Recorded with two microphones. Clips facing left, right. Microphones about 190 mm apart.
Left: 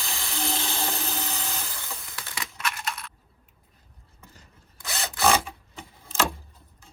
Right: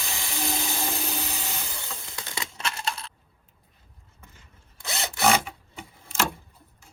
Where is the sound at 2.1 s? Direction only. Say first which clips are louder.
Right 2 dB; 15° right (ahead or behind).